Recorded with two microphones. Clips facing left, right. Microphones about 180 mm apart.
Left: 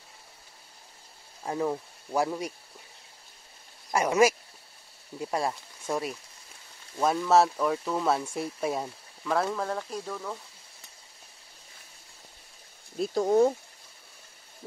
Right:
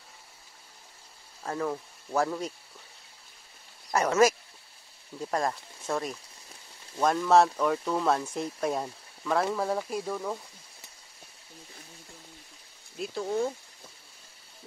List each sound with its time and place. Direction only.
1.4 s speech: 15° left (ahead or behind)
3.9 s speech: 10° left (ahead or behind); by 10.4 s 15° right (ahead or behind)
12.9 s speech: 40° left (ahead or behind)